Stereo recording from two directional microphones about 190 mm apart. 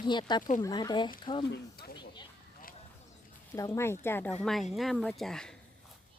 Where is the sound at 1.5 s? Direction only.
55° left (ahead or behind).